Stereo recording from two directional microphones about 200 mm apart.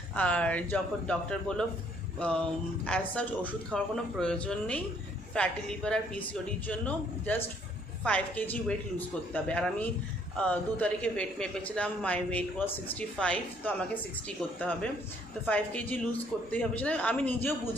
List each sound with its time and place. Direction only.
0.1 s a man's voice: 5° left (ahead or behind)